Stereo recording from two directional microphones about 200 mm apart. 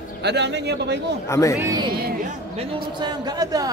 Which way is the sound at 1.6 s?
20° right (ahead or behind).